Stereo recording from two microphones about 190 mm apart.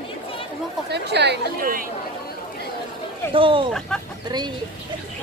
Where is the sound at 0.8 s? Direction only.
60° right (ahead or behind).